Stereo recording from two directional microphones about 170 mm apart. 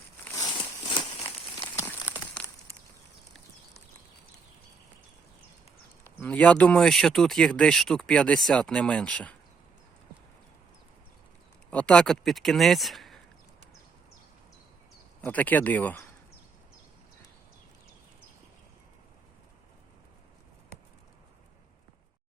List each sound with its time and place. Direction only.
0.3 s crumpling: 20° left (ahead or behind)
1.7 s a sound: 15° left (ahead or behind)
6.1 s speech: 10° left (ahead or behind)
11.7 s speech: 5° left (ahead or behind)
15.2 s speech: 10° left (ahead or behind)